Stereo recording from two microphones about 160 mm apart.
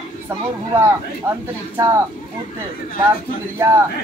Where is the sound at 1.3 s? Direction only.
15° right (ahead or behind).